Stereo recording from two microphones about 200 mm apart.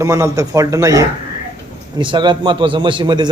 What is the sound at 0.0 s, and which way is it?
A man's voice, 15° right (ahead or behind).